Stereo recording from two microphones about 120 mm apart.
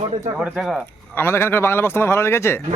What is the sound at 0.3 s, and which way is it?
Speech, centre (ahead or behind).